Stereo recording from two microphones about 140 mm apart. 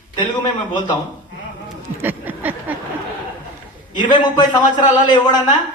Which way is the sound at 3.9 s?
35° left (ahead or behind).